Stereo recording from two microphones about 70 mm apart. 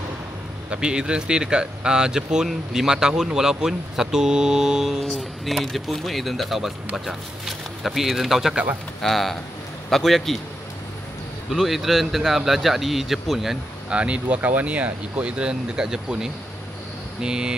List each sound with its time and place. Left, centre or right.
0.7 s speech: centre
11.5 s speech: centre
13.8 s speech: centre